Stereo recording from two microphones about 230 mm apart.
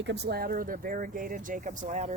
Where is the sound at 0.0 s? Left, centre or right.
Right.